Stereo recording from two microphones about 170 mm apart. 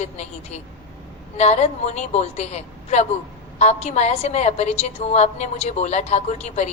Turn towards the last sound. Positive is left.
turn(degrees=40)  # may be behind; listen again after turning